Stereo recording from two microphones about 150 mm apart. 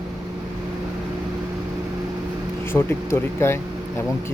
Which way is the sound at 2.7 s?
15° left (ahead or behind).